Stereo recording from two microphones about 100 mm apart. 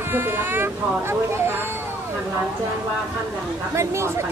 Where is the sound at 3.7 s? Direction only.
25° right (ahead or behind).